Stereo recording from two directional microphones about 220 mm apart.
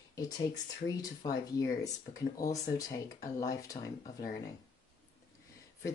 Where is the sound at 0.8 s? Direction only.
15° left (ahead or behind).